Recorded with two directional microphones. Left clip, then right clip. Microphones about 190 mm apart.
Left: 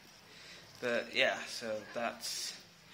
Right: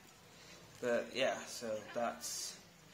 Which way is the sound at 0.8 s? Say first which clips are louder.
Left 3 dB; centre (ahead or behind).